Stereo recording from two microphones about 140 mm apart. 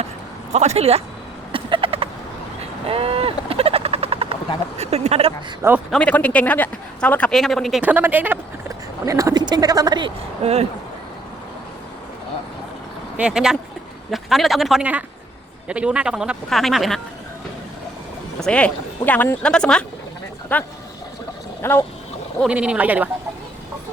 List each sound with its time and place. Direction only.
0.5 s speech: 50° right (ahead or behind)
1.5 s a sound: 40° right (ahead or behind)
2.6 s helicopter: 45° right (ahead or behind)
4.8 s speech: 50° right (ahead or behind)
5.9 s a man's voice: 10° left (ahead or behind)
7.8 s speech: 10° right (ahead or behind); by 10.1 s 30° right (ahead or behind)
10.4 s speech: 45° right (ahead or behind)
13.1 s speech: 5° right (ahead or behind)
18.3 s a man's voice: 5° left (ahead or behind)
22.4 s speech: 10° right (ahead or behind)